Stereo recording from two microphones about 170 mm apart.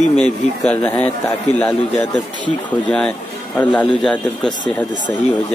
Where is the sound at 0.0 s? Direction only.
40° left (ahead or behind).